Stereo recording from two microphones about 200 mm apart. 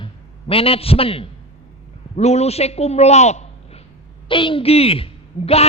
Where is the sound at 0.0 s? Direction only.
30° left (ahead or behind).